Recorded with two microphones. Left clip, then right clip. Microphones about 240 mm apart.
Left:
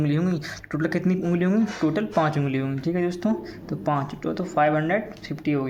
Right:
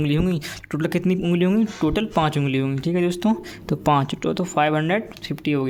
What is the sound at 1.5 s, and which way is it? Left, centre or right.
Speech, right.